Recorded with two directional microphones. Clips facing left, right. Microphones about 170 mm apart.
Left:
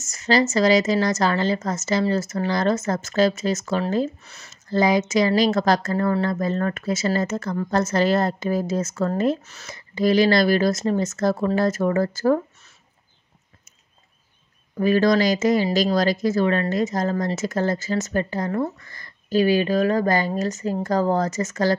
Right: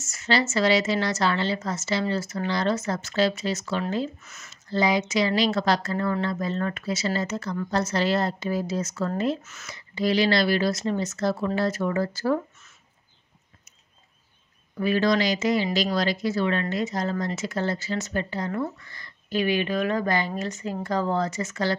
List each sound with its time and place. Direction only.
0.0 s a woman's voice: 40° left (ahead or behind)
9.8 s a woman's voice: 45° left (ahead or behind)
14.8 s a woman's voice: 45° left (ahead or behind)